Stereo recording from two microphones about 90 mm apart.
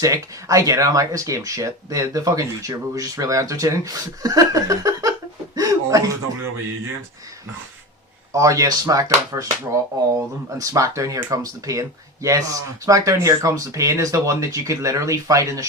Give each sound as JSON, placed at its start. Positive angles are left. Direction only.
{"t": 0.0, "sound": "speech", "side_deg": -40}
{"t": 8.3, "sound": "speech", "side_deg": -35}
{"t": 10.6, "sound": "speech", "side_deg": -35}